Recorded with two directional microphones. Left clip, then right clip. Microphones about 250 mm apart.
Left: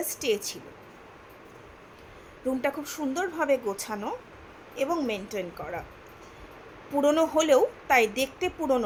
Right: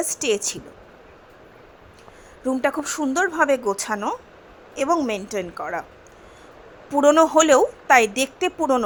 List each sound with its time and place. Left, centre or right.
0.0 s a woman's voice: centre
2.6 s a woman's voice: centre
6.9 s a woman's voice: centre